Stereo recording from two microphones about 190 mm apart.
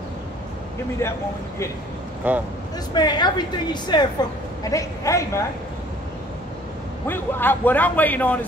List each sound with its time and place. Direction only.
2.3 s speech: 10° right (ahead or behind)
2.9 s a woman's voice: 20° left (ahead or behind)
7.1 s a man's voice: 10° left (ahead or behind)